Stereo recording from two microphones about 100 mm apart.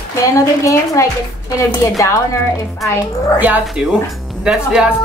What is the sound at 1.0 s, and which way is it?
Speech, 30° left (ahead or behind).